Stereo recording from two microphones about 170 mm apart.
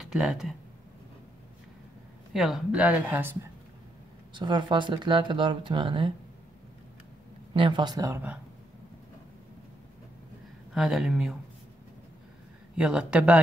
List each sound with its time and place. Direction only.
0.0 s speech: 5° right (ahead or behind)
2.3 s speech: 5° right (ahead or behind)
4.3 s speech: 25° right (ahead or behind)
7.5 s speech: 30° right (ahead or behind)
10.7 s speech: centre (ahead or behind)
12.7 s speech: 5° right (ahead or behind)